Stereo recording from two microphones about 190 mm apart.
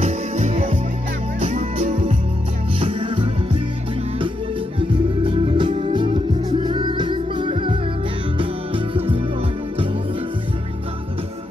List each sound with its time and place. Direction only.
0.0 s music: 30° right (ahead or behind)
4.7 s music: 25° right (ahead or behind)